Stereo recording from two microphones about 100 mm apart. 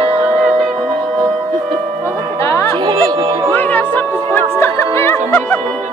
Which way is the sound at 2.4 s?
30° left (ahead or behind).